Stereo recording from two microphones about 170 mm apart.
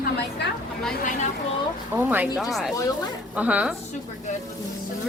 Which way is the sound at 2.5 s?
Centre (ahead or behind).